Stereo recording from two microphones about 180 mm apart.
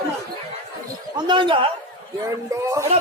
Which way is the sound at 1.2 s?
25° right (ahead or behind).